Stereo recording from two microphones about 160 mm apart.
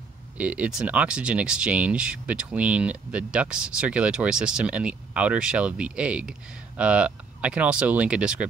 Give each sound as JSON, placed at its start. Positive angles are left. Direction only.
{"t": 0.4, "sound": "speech", "side_deg": -10}